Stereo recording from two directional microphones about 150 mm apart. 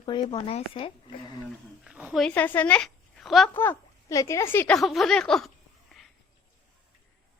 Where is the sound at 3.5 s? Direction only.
15° left (ahead or behind).